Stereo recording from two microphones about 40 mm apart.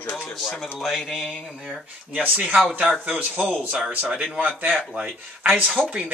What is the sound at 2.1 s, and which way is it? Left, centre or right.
Speech, right.